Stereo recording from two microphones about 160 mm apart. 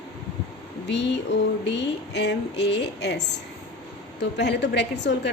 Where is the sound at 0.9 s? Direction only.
90° left.